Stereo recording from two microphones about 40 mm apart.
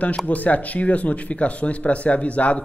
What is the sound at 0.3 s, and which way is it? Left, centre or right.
Speech, left.